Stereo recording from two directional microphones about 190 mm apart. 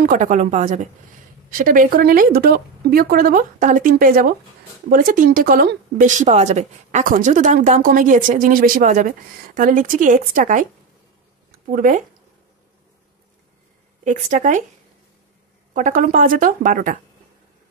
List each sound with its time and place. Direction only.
0.0 s a woman's voice: 40° right (ahead or behind)
14.0 s a woman's voice: 40° right (ahead or behind)
15.7 s speech: 45° right (ahead or behind)